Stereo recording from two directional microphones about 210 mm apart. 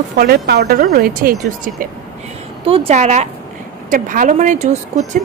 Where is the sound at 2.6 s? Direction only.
25° right (ahead or behind).